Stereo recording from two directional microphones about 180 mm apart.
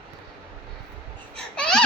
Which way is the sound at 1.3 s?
5° left (ahead or behind).